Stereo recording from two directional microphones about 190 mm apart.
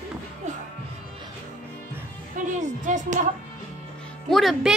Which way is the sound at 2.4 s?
40° right (ahead or behind).